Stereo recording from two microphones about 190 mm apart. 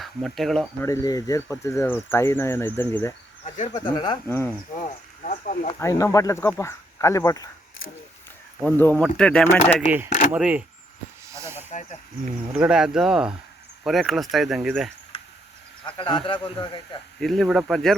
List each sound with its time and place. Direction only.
0.0 s speech: centre (ahead or behind)
0.8 s speech: 20° left (ahead or behind)
3.4 s speech: 35° left (ahead or behind)
3.8 s speech: 20° left (ahead or behind)
4.8 s speech: 40° left (ahead or behind)
5.8 s speech: 15° left (ahead or behind)
8.6 s speech: 10° left (ahead or behind)
10.3 s speech: 5° right (ahead or behind)
11.3 s snake: 15° right (ahead or behind)
11.7 s speech: 40° left (ahead or behind)
12.5 s speech: 5° right (ahead or behind)
15.1 s a sound: 30° left (ahead or behind)
16.0 s speech: 25° left (ahead or behind)
17.2 s speech: centre (ahead or behind)